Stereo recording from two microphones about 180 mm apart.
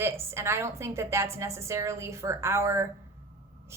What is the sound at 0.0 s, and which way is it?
A woman's voice, 15° right (ahead or behind).